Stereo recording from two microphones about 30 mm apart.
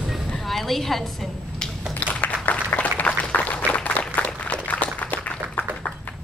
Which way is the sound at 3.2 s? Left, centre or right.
Left.